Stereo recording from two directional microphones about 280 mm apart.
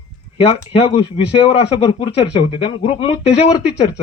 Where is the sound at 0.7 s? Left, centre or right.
Left.